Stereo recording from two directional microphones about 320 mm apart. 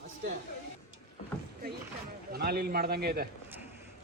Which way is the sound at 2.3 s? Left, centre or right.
Right.